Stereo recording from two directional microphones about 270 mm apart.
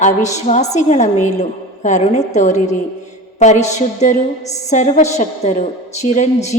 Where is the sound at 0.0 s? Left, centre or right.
Left.